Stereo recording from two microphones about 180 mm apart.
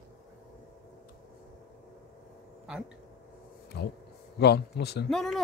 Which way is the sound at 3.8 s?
70° left (ahead or behind).